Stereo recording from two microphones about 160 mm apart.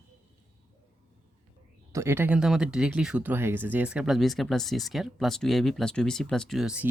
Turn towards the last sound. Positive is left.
turn(degrees=-5)  # may be behind; listen again after turning